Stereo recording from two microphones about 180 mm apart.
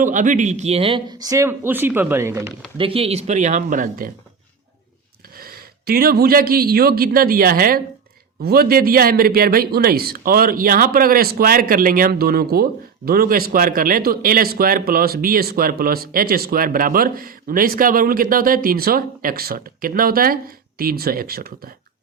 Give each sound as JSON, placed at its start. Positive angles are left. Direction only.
{"t": 0.0, "sound": "speech", "side_deg": -45}
{"t": 2.7, "sound": "speech", "side_deg": -30}
{"t": 5.4, "sound": "a man's voice", "side_deg": -55}